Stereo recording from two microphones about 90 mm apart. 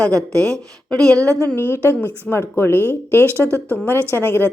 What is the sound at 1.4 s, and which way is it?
Speech, 25° left (ahead or behind).